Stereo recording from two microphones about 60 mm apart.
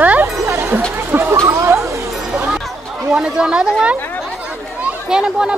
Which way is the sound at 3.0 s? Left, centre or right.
Centre.